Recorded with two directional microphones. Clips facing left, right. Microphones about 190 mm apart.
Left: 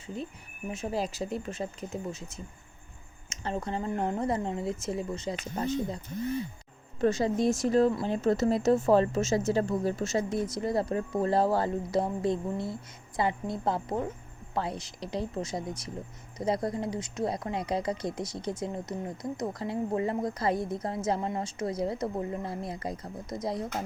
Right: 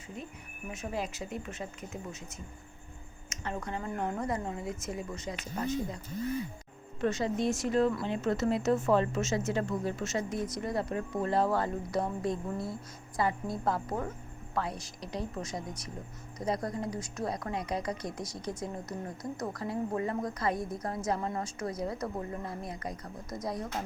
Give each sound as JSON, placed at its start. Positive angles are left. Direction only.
{"t": 0.7, "sound": "a woman's voice", "side_deg": 30}
{"t": 3.2, "sound": "a woman's voice", "side_deg": 30}
{"t": 7.0, "sound": "a woman's voice", "side_deg": 35}